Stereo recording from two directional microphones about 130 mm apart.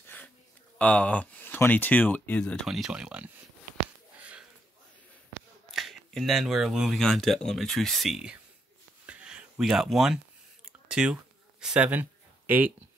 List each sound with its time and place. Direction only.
0.7 s speech: 10° left (ahead or behind)
2.6 s speech: centre (ahead or behind)
4.2 s sniff: 10° right (ahead or behind)
5.7 s speech: centre (ahead or behind)
9.0 s a sound: 5° right (ahead or behind)
10.9 s speech: 5° right (ahead or behind)